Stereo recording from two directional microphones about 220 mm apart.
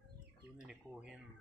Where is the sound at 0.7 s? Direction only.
5° right (ahead or behind).